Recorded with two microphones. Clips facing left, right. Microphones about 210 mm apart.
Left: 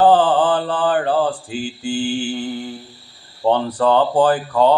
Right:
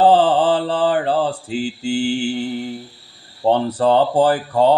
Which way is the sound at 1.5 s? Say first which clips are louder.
Right 3 dB; 70° right (ahead or behind).